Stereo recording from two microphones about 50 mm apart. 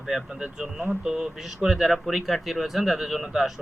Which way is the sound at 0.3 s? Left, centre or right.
Right.